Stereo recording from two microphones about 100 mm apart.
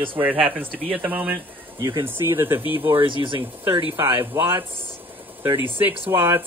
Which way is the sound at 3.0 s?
55° right (ahead or behind).